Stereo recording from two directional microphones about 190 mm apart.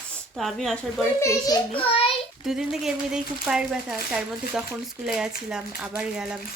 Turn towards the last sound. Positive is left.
turn(degrees=-5)  # may be behind; listen again after turning